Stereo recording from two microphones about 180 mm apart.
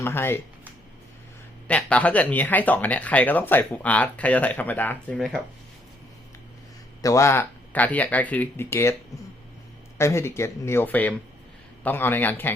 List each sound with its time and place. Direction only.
0.0 s speech: 15° left (ahead or behind)
1.6 s speech: 5° left (ahead or behind)
7.0 s speech: 15° left (ahead or behind)
10.0 s speech: 15° left (ahead or behind)